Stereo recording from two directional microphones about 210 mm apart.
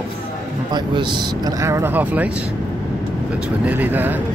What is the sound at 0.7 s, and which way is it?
A man's voice, 20° right (ahead or behind).